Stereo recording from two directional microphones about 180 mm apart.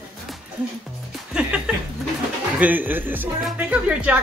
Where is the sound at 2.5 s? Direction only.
10° right (ahead or behind).